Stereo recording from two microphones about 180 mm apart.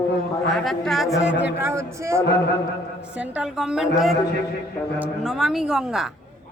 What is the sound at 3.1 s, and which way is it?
A man's voice, 5° right (ahead or behind).